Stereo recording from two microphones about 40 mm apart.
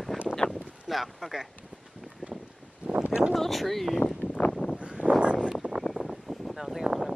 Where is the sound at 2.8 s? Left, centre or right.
Right.